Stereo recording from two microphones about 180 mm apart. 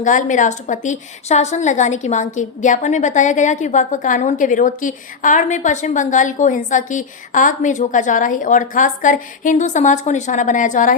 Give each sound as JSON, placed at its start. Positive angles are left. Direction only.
{"t": 0.0, "sound": "a woman's voice", "side_deg": 45}